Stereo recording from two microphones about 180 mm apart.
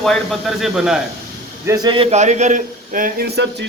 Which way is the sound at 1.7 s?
25° right (ahead or behind).